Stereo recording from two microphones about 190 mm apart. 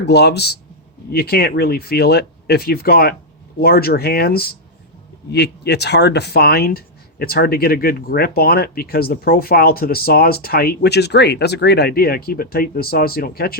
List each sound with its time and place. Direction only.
0.0 s speech: 60° left (ahead or behind)